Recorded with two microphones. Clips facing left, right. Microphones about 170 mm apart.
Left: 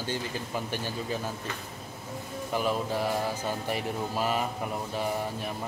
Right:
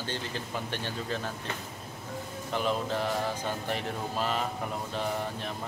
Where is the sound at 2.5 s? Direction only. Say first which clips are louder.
Left 1 dB; 5° left (ahead or behind).